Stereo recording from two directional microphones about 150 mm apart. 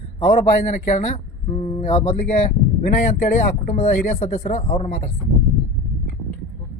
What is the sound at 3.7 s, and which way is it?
Speech, 50° left (ahead or behind).